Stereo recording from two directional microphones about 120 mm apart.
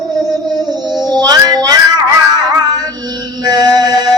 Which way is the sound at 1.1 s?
35° right (ahead or behind).